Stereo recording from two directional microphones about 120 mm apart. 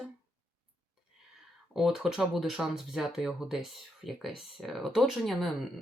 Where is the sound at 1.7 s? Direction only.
5° right (ahead or behind).